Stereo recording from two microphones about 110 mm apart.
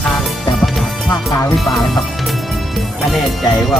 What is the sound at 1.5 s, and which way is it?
Speech, centre (ahead or behind).